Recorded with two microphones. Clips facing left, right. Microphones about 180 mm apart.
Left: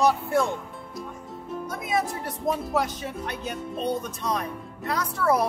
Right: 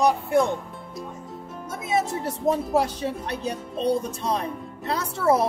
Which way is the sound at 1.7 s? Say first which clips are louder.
Right 3 dB; 25° right (ahead or behind).